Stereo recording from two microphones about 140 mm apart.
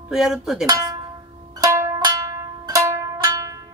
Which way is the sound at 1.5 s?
20° right (ahead or behind).